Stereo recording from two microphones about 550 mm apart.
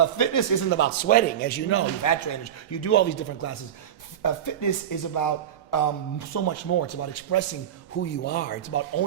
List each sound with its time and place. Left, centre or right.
0.0 s speech: left
0.7 s speech: centre
2.0 s a man's voice: left